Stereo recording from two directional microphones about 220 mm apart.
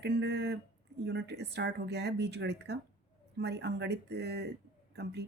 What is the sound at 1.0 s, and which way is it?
Speech, 50° right (ahead or behind).